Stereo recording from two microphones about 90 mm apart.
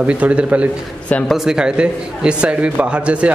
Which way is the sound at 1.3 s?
5° right (ahead or behind).